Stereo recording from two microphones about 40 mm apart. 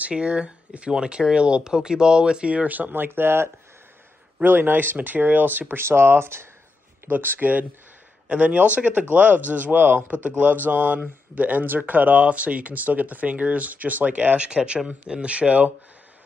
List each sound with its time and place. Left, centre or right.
0.1 s speech: right
2.7 s speech: right
4.5 s speech: right
5.0 s speech: right
5.8 s speech: right
7.1 s speech: right
8.3 s speech: right
10.0 s speech: right
12.2 s speech: right